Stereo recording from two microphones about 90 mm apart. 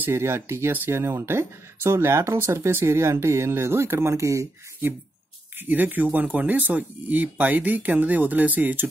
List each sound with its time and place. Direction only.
0.0 s speech: 25° right (ahead or behind)
5.7 s speech: 20° right (ahead or behind)